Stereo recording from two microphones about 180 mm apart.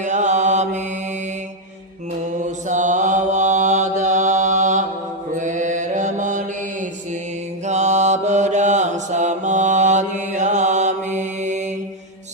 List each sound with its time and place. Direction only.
0.0 s mantra: 40° right (ahead or behind)
2.6 s mantra: 45° right (ahead or behind)
7.6 s mantra: 40° right (ahead or behind)